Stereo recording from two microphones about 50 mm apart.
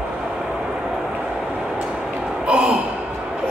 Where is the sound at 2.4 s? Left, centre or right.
Right.